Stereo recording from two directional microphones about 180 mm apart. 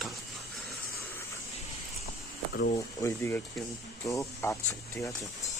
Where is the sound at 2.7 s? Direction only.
15° left (ahead or behind).